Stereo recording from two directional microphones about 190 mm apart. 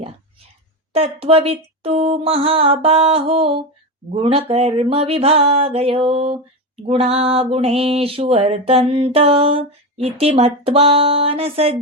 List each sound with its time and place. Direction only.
0.9 s mantra: 30° right (ahead or behind)